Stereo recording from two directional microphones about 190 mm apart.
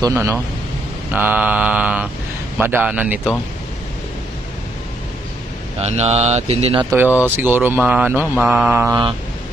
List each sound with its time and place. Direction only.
0.0 s mantra: 15° right (ahead or behind)
5.8 s speech: 35° right (ahead or behind)
6.8 s mantra: 10° right (ahead or behind)